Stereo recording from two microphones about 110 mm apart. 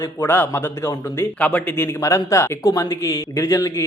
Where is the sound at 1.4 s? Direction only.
15° left (ahead or behind).